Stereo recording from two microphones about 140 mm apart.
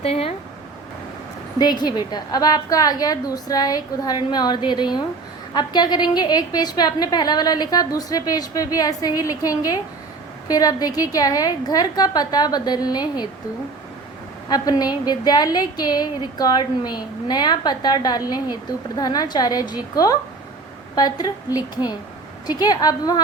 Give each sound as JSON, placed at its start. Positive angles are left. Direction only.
{"t": 0.0, "sound": "speech", "side_deg": 45}
{"t": 1.5, "sound": "a woman's voice", "side_deg": 30}
{"t": 14.5, "sound": "a woman's voice", "side_deg": 30}